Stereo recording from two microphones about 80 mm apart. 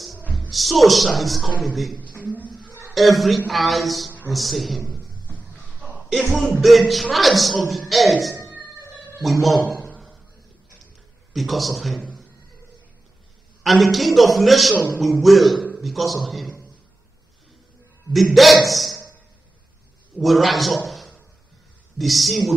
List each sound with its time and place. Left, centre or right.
0.5 s a man's voice: centre
5.8 s a sound: centre
6.6 s speech: centre
11.3 s speech: centre
13.6 s a man's voice: centre
18.1 s speech: centre
20.2 s a man's voice: centre